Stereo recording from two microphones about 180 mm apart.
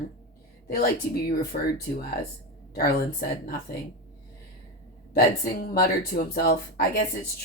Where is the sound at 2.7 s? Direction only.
55° left (ahead or behind).